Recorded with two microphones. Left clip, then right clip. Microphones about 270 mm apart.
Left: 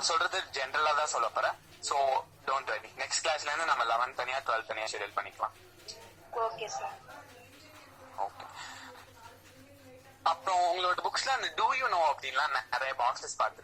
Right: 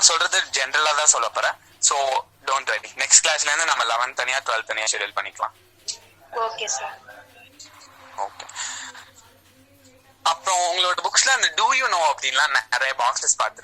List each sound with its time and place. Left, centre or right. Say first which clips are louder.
0.0 s speech: right 11 dB; right
8.1 s music: right 7 dB; right
10.2 s speech: right 7 dB; right